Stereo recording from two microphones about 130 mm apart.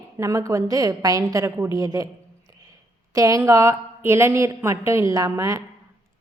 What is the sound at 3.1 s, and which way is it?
A woman's voice, 25° right (ahead or behind).